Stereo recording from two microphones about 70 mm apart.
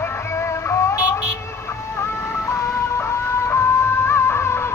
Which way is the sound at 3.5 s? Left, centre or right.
Left.